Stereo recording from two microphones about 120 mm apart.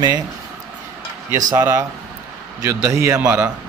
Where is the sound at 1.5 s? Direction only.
20° right (ahead or behind).